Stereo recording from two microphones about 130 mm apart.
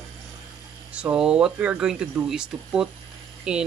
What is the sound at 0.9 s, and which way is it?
Speech, 10° right (ahead or behind).